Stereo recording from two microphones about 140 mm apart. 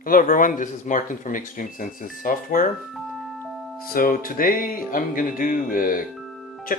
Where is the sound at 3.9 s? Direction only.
90° left.